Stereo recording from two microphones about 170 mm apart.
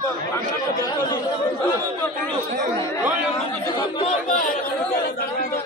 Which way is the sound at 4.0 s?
35° left (ahead or behind).